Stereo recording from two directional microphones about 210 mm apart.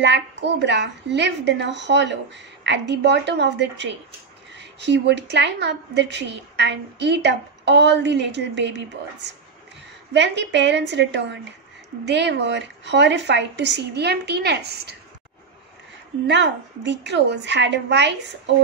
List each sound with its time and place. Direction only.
0.0 s a woman's voice: 55° right (ahead or behind)
16.3 s a woman's voice: 55° right (ahead or behind)